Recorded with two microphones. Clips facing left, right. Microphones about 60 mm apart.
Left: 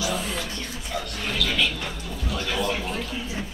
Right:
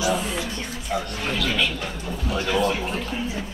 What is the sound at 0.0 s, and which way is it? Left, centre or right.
Music, right.